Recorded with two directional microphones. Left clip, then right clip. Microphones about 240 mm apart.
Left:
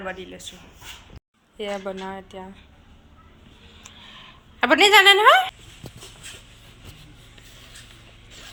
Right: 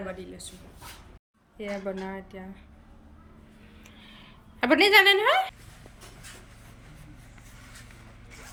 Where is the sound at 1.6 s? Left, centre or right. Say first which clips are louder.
Left 4 dB; centre.